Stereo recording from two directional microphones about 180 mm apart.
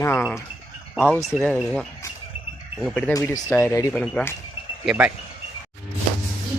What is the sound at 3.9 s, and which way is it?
Speech, centre (ahead or behind).